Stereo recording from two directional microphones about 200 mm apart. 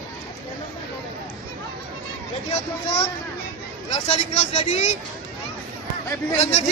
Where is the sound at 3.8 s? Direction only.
30° left (ahead or behind).